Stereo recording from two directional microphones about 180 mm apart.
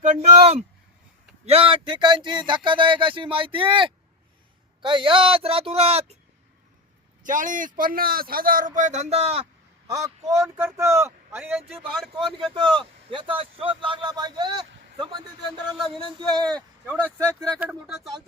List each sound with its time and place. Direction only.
0.0 s speech: 40° right (ahead or behind)
7.3 s speech: 45° right (ahead or behind)
9.8 s speech: 20° right (ahead or behind)
11.9 s speech: centre (ahead or behind)
12.5 s speech: 25° right (ahead or behind); by 18.1 s 5° right (ahead or behind)